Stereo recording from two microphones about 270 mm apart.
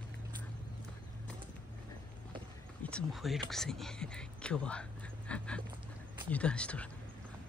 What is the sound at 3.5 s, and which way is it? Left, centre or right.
Whispering, centre.